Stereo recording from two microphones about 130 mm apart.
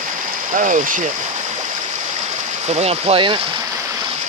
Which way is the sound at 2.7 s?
55° right (ahead or behind).